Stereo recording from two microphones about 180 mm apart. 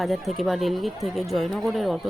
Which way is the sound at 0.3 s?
Centre (ahead or behind).